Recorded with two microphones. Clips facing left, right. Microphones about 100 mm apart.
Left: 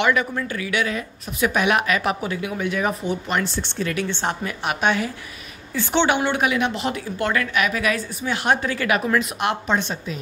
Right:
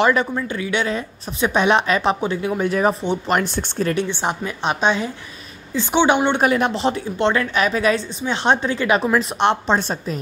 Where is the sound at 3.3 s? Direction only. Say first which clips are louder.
Right 4 dB; 45° right (ahead or behind).